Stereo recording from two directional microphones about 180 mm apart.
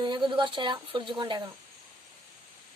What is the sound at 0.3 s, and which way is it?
Speech, 25° right (ahead or behind).